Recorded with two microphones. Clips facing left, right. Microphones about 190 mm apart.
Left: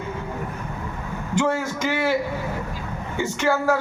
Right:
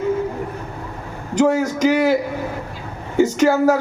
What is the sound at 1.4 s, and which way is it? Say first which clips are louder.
Speech: right 7 dB; 40° right (ahead or behind).